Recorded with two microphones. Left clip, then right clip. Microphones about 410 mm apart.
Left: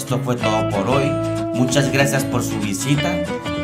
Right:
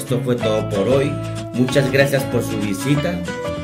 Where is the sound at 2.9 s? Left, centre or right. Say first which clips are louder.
Left 3 dB; centre.